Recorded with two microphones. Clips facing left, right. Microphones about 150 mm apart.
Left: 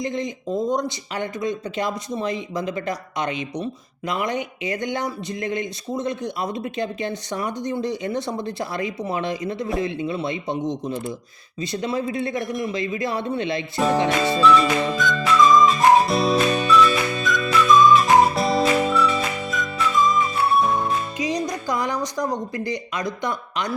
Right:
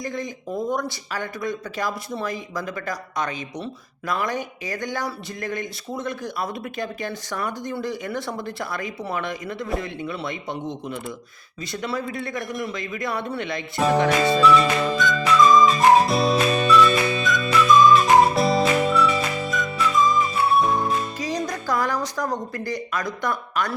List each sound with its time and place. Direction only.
0.0 s speech: 20° left (ahead or behind)
12.5 s a man's voice: centre (ahead or behind)
12.7 s speech: 25° left (ahead or behind)
13.7 s a man's voice: centre (ahead or behind)
14.4 s music: centre (ahead or behind)
21.2 s a woman's voice: 15° left (ahead or behind)